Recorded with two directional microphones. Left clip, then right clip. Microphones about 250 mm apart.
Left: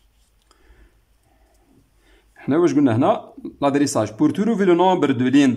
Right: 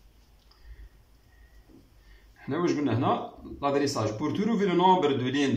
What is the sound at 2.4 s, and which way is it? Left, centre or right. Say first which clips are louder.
A man's voice: left 11 dB; left.